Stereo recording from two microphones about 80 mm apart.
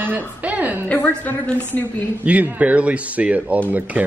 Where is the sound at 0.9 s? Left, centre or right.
Left.